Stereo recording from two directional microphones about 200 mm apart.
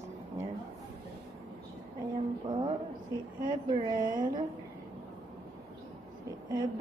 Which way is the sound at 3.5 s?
20° right (ahead or behind).